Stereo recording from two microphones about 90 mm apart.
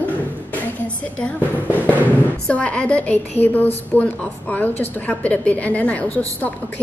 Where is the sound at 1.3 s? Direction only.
20° right (ahead or behind).